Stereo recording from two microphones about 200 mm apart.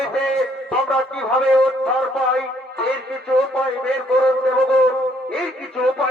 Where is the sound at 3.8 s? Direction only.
5° left (ahead or behind).